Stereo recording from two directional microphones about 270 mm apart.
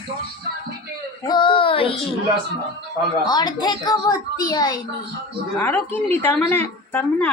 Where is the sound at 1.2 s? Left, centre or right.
Centre.